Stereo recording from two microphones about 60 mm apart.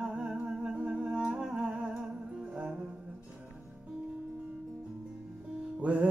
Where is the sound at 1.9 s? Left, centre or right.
Centre.